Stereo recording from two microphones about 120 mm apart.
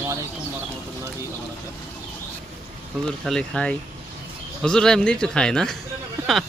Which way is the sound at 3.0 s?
5° left (ahead or behind).